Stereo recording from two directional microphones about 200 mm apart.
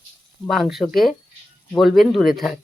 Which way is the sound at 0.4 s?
Centre (ahead or behind).